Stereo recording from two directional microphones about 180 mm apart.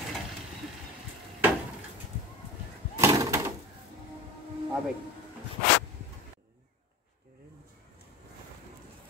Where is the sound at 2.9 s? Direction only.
15° right (ahead or behind).